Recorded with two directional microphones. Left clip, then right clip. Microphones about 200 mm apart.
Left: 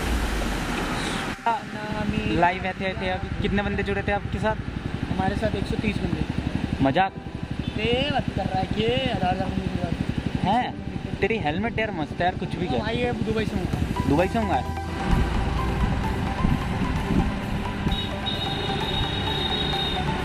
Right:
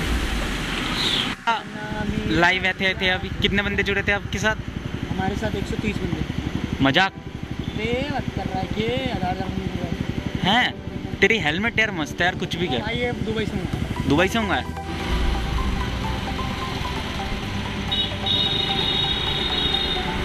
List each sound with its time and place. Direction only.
2.3 s speech: 5° left (ahead or behind)
6.8 s speech: 10° left (ahead or behind)
7.8 s speech: 20° left (ahead or behind)
10.4 s speech: 5° left (ahead or behind)
12.9 s speech: 25° left (ahead or behind)
14.1 s speech: 5° left (ahead or behind)